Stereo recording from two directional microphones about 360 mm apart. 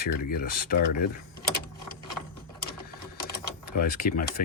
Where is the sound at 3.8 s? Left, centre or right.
Left.